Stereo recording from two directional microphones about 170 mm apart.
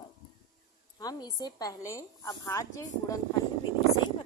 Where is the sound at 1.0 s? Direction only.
20° left (ahead or behind).